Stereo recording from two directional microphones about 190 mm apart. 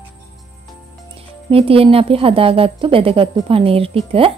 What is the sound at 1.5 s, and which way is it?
A woman's voice, 30° right (ahead or behind).